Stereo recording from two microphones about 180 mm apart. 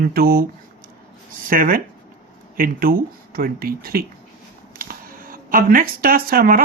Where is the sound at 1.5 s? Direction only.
50° right (ahead or behind).